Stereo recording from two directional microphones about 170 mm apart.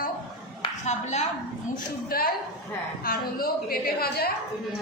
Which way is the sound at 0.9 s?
40° left (ahead or behind).